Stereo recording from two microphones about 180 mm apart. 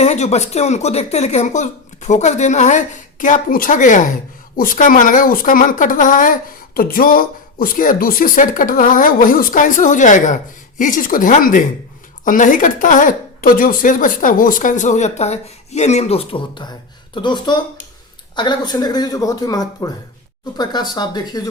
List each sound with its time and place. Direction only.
0.0 s speech: 35° left (ahead or behind)